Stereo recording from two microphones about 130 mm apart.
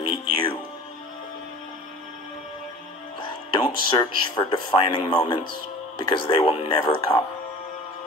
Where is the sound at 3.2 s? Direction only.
40° left (ahead or behind).